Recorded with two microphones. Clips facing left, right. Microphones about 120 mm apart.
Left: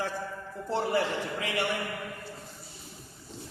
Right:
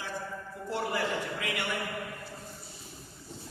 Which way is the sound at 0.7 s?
30° left (ahead or behind).